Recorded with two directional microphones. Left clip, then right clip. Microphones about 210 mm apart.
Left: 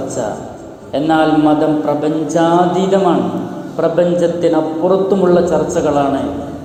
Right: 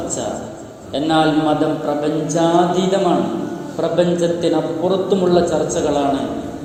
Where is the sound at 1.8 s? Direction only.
15° left (ahead or behind).